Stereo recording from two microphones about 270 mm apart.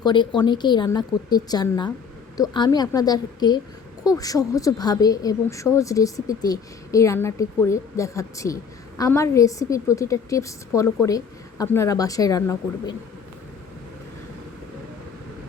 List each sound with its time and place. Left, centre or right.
0.0 s a woman's voice: centre